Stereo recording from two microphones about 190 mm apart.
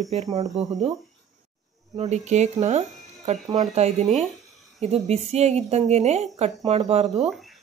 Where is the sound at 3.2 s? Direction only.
25° right (ahead or behind).